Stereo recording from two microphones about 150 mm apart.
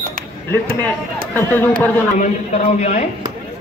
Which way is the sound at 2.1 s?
55° left (ahead or behind).